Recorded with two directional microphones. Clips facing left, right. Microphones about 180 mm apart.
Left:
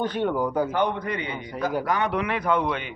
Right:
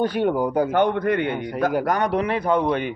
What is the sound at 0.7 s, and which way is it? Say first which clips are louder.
A man's voice: right 6 dB; 55° right (ahead or behind).